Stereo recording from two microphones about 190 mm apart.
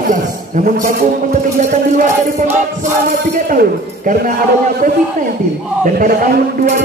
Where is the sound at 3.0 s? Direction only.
45° right (ahead or behind).